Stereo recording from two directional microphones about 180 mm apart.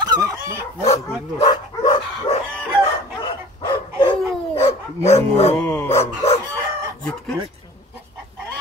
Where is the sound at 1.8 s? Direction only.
25° left (ahead or behind).